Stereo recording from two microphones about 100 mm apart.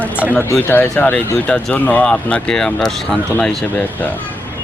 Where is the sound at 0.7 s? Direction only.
15° left (ahead or behind).